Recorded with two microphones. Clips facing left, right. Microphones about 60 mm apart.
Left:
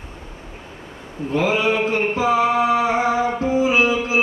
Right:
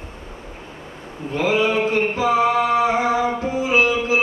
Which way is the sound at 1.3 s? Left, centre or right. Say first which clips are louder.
Even; left.